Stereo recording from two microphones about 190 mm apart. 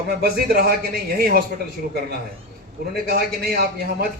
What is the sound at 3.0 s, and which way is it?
A man's voice, 50° right (ahead or behind).